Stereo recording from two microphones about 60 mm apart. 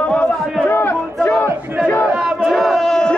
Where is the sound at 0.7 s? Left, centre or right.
Left.